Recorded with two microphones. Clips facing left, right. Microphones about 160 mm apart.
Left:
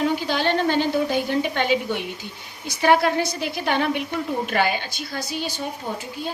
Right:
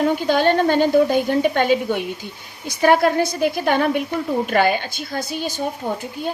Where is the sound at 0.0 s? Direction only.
50° right (ahead or behind).